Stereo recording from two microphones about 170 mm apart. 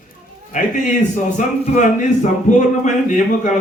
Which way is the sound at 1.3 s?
45° left (ahead or behind).